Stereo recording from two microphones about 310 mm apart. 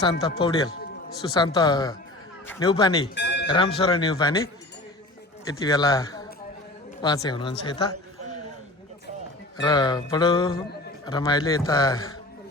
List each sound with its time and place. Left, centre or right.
0.0 s a man's voice: centre
3.2 s music: left
3.4 s a man's voice: centre
5.5 s a man's voice: centre
9.6 s a man's voice: centre